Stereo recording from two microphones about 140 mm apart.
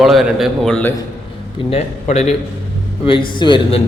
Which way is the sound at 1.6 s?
50° left (ahead or behind).